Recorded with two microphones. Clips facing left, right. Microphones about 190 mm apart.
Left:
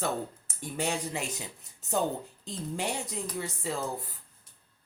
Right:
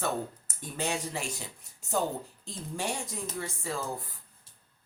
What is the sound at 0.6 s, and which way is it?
Speech, 15° left (ahead or behind).